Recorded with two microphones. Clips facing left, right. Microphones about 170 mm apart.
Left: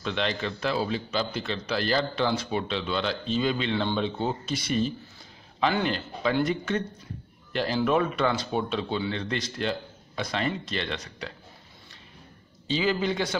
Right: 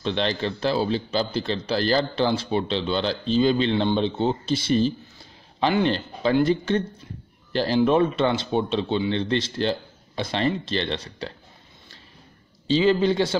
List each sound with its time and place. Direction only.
0.0 s speech: 30° right (ahead or behind)
12.6 s speech: 30° right (ahead or behind)